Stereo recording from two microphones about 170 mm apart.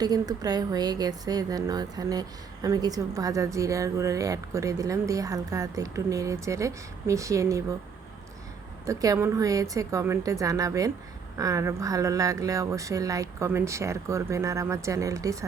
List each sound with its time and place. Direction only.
0.0 s a woman's voice: 20° right (ahead or behind)
8.9 s a woman's voice: 20° right (ahead or behind)